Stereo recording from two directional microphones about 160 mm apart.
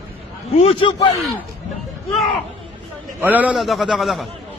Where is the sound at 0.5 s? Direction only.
35° left (ahead or behind).